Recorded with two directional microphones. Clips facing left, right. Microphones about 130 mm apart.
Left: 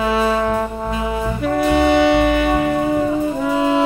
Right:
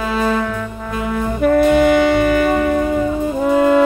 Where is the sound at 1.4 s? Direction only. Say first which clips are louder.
Right 4 dB; 50° right (ahead or behind).